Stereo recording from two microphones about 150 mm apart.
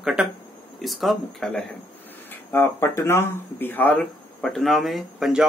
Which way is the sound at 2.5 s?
15° left (ahead or behind).